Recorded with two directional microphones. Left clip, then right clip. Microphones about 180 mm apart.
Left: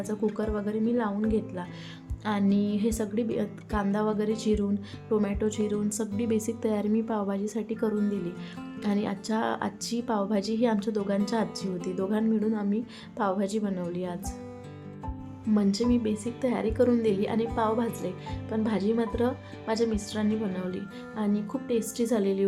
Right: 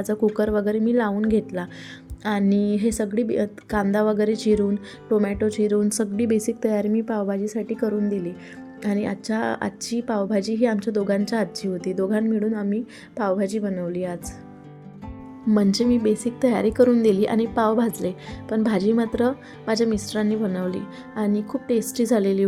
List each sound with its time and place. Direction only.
0.3 s a woman's voice: 35° right (ahead or behind)
15.5 s a woman's voice: 35° right (ahead or behind)